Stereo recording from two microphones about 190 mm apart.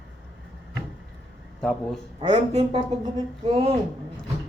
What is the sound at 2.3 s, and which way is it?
Speech, 30° right (ahead or behind).